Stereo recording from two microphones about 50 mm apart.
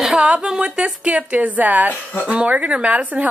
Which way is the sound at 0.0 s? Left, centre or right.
Centre.